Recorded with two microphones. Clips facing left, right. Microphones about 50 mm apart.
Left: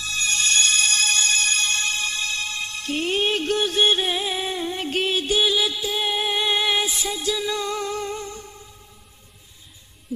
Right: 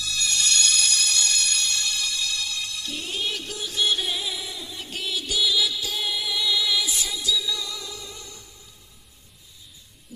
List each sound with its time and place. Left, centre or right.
0.0 s music: left